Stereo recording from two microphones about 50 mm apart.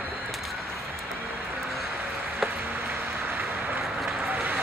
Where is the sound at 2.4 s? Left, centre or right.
Centre.